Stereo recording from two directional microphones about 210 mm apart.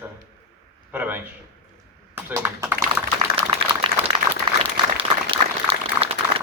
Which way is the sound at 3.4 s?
30° right (ahead or behind).